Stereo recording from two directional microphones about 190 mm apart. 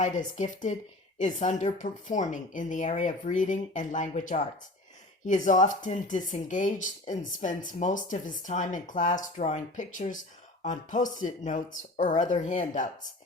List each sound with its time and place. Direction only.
0.0 s speech: 40° left (ahead or behind)